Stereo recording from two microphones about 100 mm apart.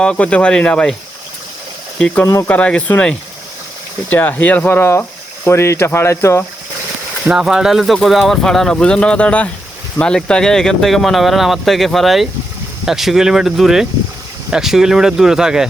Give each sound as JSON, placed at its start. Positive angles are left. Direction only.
{"t": 0.0, "sound": "speech", "side_deg": 10}
{"t": 2.2, "sound": "speech", "side_deg": 30}
{"t": 2.5, "sound": "speech", "side_deg": 10}
{"t": 7.3, "sound": "speech", "side_deg": -5}